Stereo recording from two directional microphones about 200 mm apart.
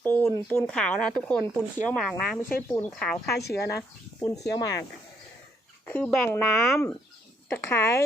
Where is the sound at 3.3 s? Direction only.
55° left (ahead or behind).